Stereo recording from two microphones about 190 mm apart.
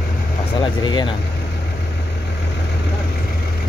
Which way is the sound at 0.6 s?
25° left (ahead or behind).